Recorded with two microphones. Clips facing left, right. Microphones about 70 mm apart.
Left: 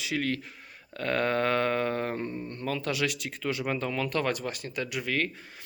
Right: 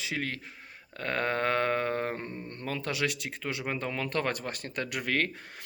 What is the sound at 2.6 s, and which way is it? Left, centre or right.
Speech, right.